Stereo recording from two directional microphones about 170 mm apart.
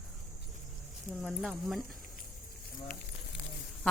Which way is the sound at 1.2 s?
Centre (ahead or behind).